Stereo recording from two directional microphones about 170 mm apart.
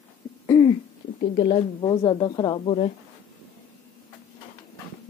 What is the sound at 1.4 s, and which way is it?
Speech, 25° left (ahead or behind).